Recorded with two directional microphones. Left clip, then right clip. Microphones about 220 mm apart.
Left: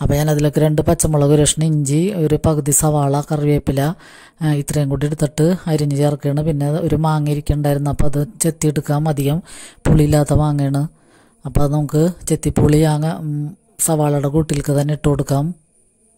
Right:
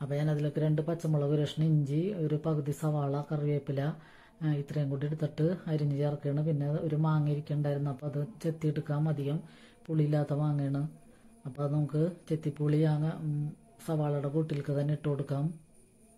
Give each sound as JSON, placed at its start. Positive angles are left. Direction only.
{"t": 0.0, "sound": "speech", "side_deg": 45}